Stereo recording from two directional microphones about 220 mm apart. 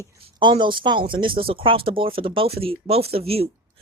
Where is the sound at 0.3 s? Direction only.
20° right (ahead or behind).